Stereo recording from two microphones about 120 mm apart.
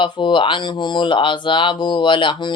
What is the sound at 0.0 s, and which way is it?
Speech, 45° left (ahead or behind).